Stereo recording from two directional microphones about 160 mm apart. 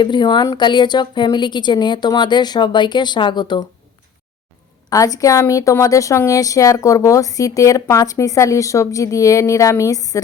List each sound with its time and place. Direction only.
0.0 s a woman's voice: 30° left (ahead or behind)
4.9 s a woman's voice: 20° left (ahead or behind)